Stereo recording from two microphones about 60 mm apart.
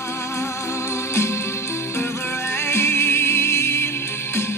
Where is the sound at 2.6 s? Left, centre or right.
Left.